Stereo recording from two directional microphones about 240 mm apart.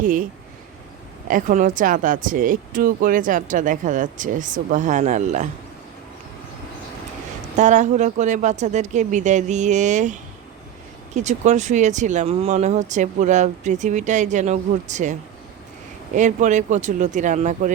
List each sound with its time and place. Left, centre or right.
0.0 s speech: right
1.3 s speech: right
7.5 s speech: right
16.1 s speech: right